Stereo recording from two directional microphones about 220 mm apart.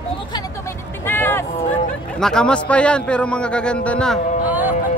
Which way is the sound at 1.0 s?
10° left (ahead or behind).